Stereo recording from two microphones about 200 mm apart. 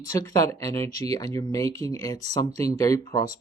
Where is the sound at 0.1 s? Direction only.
15° left (ahead or behind).